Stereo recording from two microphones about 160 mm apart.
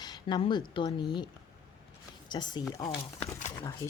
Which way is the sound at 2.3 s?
25° left (ahead or behind).